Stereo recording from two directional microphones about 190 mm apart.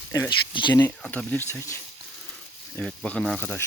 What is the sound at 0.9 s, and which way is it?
Speech, 5° left (ahead or behind).